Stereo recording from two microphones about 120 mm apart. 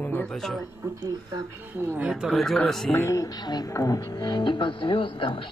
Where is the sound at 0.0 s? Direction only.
10° left (ahead or behind).